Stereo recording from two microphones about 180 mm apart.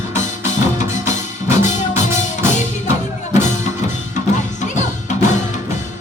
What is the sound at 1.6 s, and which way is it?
Music, 40° left (ahead or behind).